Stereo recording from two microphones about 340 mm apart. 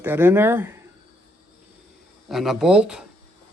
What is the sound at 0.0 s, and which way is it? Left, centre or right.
Speech, centre.